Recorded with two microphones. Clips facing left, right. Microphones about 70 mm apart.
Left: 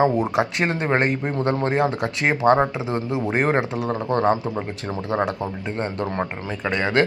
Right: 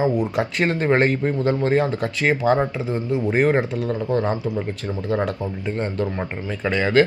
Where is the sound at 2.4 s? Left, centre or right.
Left.